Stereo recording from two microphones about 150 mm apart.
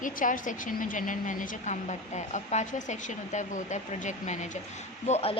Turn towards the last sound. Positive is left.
turn(degrees=45)  # may be behind; listen again after turning